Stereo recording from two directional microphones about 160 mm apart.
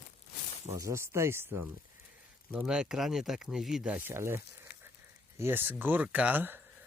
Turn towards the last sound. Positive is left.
turn(degrees=-10)  # may be behind; listen again after turning